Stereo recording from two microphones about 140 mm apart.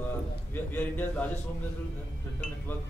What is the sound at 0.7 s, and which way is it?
Speech, 15° left (ahead or behind).